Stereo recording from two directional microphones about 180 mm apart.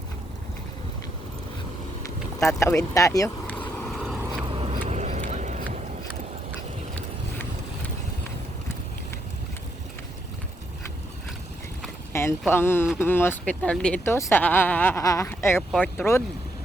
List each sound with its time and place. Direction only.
2.6 s vehicle: 15° left (ahead or behind); by 4.2 s centre (ahead or behind)
4.5 s vehicle: 30° right (ahead or behind)
12.1 s a sound: 15° left (ahead or behind)
12.5 s speech: 10° left (ahead or behind)